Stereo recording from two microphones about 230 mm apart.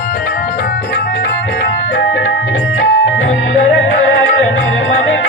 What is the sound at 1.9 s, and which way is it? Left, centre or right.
Music, left.